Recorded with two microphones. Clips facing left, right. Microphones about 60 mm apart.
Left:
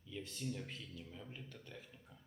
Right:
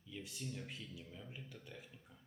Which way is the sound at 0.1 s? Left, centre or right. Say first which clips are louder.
Left 2 dB; centre.